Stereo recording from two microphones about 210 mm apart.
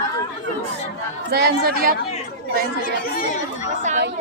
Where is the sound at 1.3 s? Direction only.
50° right (ahead or behind).